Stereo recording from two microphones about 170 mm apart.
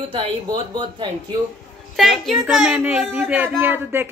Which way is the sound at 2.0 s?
Centre (ahead or behind).